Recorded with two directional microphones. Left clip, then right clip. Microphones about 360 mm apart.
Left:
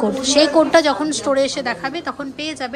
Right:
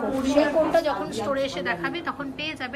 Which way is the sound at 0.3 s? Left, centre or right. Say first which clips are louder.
Left 7 dB; left.